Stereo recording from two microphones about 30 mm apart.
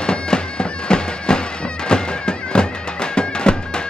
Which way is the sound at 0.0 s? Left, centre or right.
Left.